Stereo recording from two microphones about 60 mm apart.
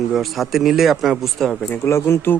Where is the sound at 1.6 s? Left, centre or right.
Left.